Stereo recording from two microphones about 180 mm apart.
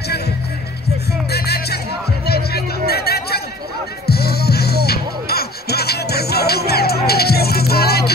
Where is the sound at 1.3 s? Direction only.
60° left (ahead or behind).